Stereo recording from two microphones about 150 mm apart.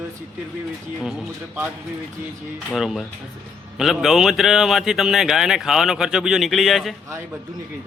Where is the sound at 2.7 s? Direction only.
Centre (ahead or behind).